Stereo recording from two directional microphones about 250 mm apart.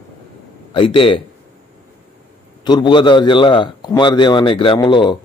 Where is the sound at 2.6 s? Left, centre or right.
Centre.